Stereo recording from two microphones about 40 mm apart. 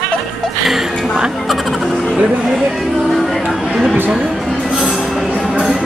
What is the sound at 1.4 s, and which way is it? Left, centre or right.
Music, centre.